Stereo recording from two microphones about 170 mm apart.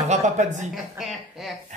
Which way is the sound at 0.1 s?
45° right (ahead or behind).